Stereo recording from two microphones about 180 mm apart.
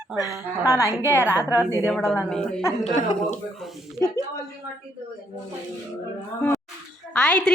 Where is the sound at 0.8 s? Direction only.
15° right (ahead or behind).